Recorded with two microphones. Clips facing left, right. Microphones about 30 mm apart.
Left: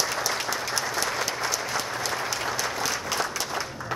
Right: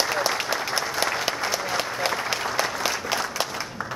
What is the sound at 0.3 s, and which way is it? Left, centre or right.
Applause, centre.